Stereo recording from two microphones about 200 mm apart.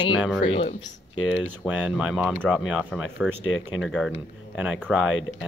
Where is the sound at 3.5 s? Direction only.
90° left.